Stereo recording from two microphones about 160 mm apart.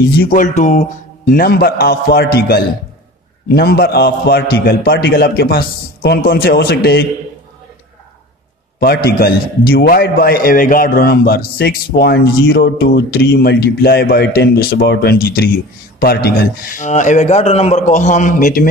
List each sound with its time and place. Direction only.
0.2 s a man's voice: 55° left (ahead or behind); by 7.1 s 80° left
8.7 s a man's voice: 75° left (ahead or behind); by 18.7 s 55° left (ahead or behind)